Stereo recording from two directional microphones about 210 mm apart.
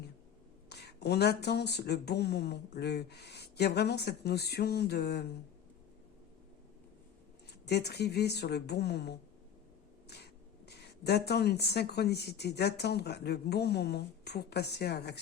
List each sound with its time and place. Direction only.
0.7 s speech: 50° left (ahead or behind)
7.7 s speech: 50° left (ahead or behind)
10.7 s speech: 50° left (ahead or behind)